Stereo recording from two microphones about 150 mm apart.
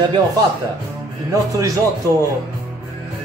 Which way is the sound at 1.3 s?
20° right (ahead or behind).